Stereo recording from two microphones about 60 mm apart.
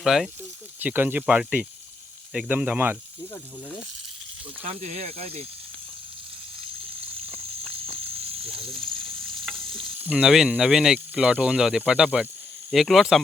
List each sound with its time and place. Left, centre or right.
0.0 s speech: centre
0.8 s speech: right
1.4 s speech: centre
8.7 s frying: centre
10.2 s speech: centre
10.9 s speech: centre
12.7 s speech: centre